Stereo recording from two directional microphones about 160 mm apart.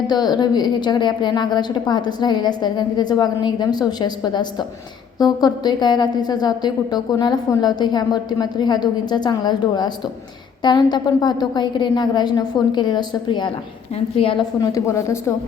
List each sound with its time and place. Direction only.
0.1 s a woman's voice: 25° left (ahead or behind)
14.6 s a woman's voice: 20° left (ahead or behind)